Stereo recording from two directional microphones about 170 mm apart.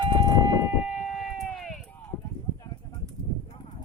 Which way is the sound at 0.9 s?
5° right (ahead or behind).